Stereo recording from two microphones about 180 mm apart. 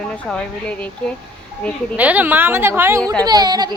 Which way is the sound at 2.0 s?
10° right (ahead or behind).